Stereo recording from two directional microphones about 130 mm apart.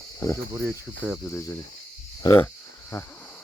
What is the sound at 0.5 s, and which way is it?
Speech, 20° right (ahead or behind).